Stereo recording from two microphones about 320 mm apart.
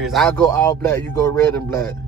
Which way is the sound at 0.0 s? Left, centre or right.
Centre.